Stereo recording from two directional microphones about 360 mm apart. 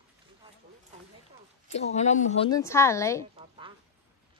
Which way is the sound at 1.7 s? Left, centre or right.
Centre.